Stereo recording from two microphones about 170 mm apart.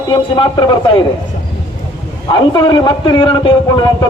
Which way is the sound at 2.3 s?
25° left (ahead or behind).